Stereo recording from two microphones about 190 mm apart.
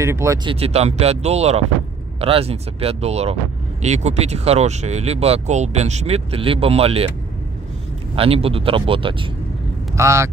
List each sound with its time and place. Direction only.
0.0 s speech: 15° right (ahead or behind)
0.5 s speech: 30° right (ahead or behind)
8.2 s speech: 30° right (ahead or behind)
9.9 s speech: 15° right (ahead or behind)